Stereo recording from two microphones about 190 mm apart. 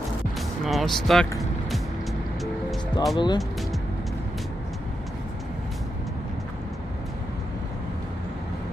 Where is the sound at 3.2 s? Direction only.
20° left (ahead or behind).